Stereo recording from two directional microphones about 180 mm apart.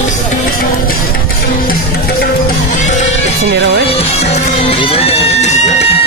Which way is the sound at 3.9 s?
35° left (ahead or behind).